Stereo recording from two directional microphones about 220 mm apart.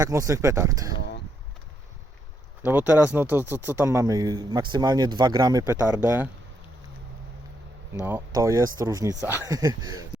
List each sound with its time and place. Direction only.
0.0 s speech: 15° right (ahead or behind)
2.6 s speech: 10° right (ahead or behind)
8.0 s speech: 10° right (ahead or behind)